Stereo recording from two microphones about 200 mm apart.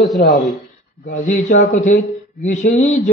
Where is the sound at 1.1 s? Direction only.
35° left (ahead or behind).